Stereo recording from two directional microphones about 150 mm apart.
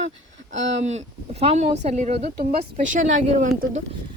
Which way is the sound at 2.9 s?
65° right (ahead or behind).